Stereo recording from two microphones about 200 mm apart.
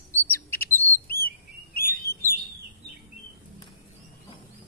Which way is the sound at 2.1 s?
50° left (ahead or behind).